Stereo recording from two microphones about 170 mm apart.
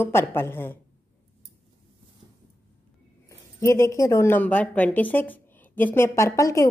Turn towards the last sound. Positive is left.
turn(degrees=20)  # may be behind; listen again after turning